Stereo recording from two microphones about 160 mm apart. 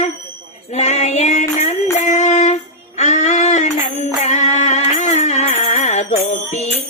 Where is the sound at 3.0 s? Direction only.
45° left (ahead or behind).